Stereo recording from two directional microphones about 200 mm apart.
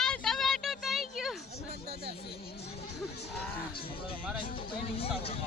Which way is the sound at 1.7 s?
55° right (ahead or behind).